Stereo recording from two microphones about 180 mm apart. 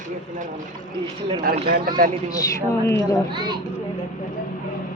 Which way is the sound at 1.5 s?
50° right (ahead or behind).